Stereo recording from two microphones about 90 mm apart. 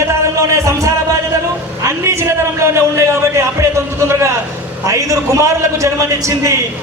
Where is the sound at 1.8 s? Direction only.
35° right (ahead or behind).